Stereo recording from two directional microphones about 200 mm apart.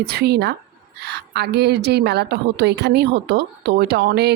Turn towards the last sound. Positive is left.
turn(degrees=-55)  # may be behind; listen again after turning